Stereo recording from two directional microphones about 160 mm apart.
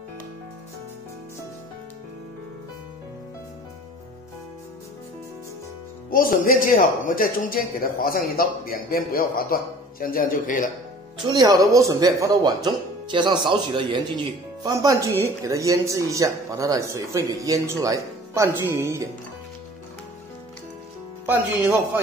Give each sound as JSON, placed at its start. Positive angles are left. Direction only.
{"t": 6.0, "sound": "speech", "side_deg": 65}
{"t": 11.2, "sound": "speech", "side_deg": -25}
{"t": 21.3, "sound": "speech", "side_deg": -10}